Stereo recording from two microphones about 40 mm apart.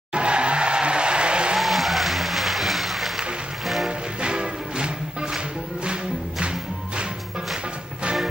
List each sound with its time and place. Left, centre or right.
0.1 s music: right
1.6 s applause: centre
3.6 s music: centre
4.2 s music: right